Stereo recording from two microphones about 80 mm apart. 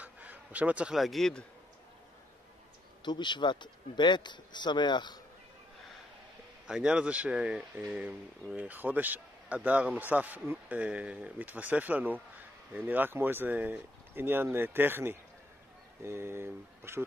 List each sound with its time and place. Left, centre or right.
0.0 s a sound: centre
0.9 s speech: centre
3.1 s speech: left
6.7 s speech: centre; by 17.0 s right